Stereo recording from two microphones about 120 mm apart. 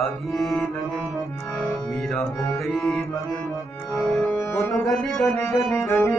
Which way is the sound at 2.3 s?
25° left (ahead or behind).